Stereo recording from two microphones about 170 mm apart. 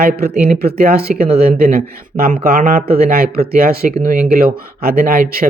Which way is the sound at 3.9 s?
50° right (ahead or behind).